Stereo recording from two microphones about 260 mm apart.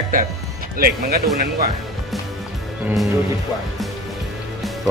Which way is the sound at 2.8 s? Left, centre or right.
Centre.